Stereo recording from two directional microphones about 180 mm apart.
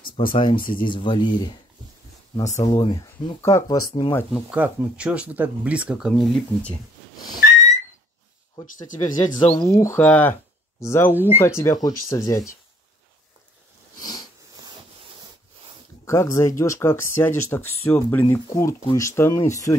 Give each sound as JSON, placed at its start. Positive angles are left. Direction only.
{"t": 0.3, "sound": "speech", "side_deg": 30}
{"t": 2.6, "sound": "speech", "side_deg": 25}
{"t": 4.3, "sound": "speech", "side_deg": -5}
{"t": 8.8, "sound": "speech", "side_deg": 45}
{"t": 9.6, "sound": "speech", "side_deg": 15}
{"t": 16.1, "sound": "speech", "side_deg": 15}